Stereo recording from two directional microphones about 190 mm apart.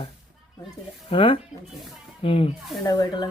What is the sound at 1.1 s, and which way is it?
Speech, 25° left (ahead or behind).